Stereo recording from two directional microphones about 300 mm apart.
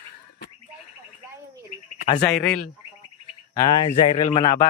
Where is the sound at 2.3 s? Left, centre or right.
Centre.